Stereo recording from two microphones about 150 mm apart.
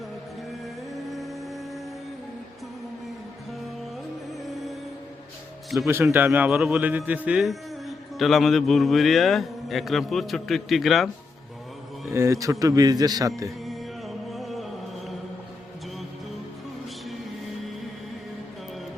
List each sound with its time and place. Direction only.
5.9 s a man's voice: 15° right (ahead or behind); by 11.1 s centre (ahead or behind)
12.1 s a man's voice: 20° right (ahead or behind)
13.7 s music: centre (ahead or behind)